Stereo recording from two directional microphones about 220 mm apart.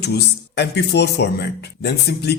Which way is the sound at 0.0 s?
50° left (ahead or behind).